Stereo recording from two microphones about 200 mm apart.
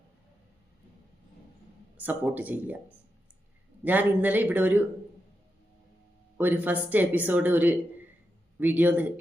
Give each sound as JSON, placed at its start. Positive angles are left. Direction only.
{"t": 2.0, "sound": "speech", "side_deg": -10}
{"t": 3.8, "sound": "speech", "side_deg": -10}
{"t": 6.3, "sound": "speech", "side_deg": -10}